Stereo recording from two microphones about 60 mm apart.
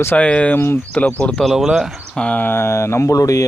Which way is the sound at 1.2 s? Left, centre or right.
Centre.